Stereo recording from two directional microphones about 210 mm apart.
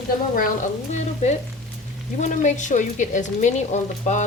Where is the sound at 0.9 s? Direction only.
35° left (ahead or behind).